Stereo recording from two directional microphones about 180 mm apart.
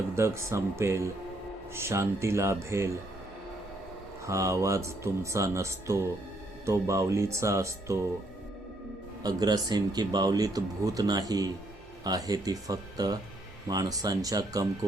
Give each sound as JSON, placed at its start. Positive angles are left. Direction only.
{"t": 0.2, "sound": "speech", "side_deg": -15}
{"t": 4.3, "sound": "speech", "side_deg": -15}
{"t": 9.2, "sound": "speech", "side_deg": -25}